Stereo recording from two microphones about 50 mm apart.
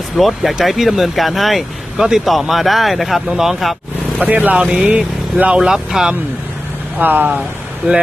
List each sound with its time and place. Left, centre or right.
0.2 s speech: centre
4.2 s speech: right
4.6 s speech: centre
7.0 s speech: right
7.8 s speech: right